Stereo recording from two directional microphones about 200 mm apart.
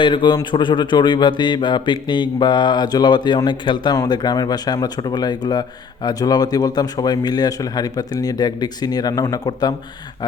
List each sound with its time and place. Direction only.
0.0 s mantra: 25° left (ahead or behind)